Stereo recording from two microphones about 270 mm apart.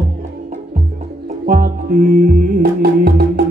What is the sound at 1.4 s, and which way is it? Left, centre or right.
Music, right.